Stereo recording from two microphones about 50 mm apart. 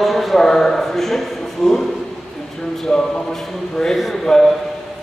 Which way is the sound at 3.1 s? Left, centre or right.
Centre.